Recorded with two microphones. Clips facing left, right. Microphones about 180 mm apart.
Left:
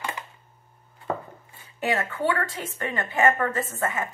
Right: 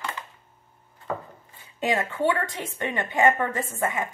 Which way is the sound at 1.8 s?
20° right (ahead or behind).